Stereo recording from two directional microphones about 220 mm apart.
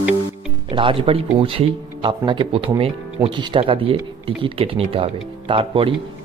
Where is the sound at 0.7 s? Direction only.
25° right (ahead or behind).